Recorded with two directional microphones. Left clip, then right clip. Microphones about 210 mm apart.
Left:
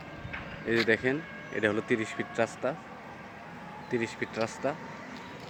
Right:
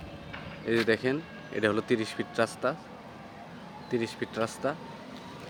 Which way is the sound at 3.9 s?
10° right (ahead or behind).